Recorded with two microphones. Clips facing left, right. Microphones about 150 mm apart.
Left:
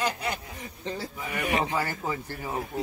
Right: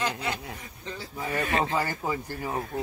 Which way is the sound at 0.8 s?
35° left (ahead or behind).